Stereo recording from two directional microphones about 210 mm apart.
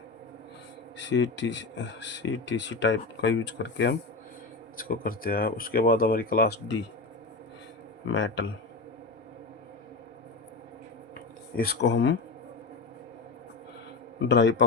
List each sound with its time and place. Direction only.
0.9 s speech: 60° left (ahead or behind)
4.8 s speech: 40° left (ahead or behind)
8.1 s speech: 60° left (ahead or behind)
11.1 s a sound: 45° left (ahead or behind)
14.3 s speech: 60° left (ahead or behind)